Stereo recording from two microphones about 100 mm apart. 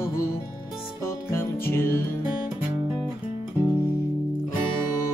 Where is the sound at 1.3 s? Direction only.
25° left (ahead or behind).